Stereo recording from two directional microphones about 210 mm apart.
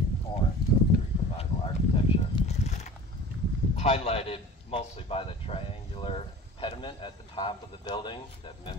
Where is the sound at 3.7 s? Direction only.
30° left (ahead or behind).